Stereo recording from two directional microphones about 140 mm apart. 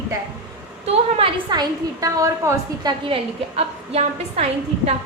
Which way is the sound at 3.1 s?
45° right (ahead or behind).